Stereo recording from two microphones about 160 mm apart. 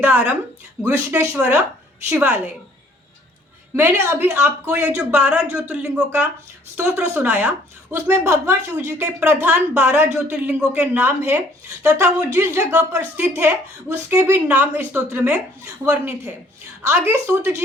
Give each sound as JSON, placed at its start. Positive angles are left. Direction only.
{"t": 0.0, "sound": "a woman's voice", "side_deg": -10}
{"t": 3.8, "sound": "a woman's voice", "side_deg": -15}